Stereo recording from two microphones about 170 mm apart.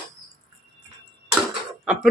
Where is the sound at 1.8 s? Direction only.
5° right (ahead or behind).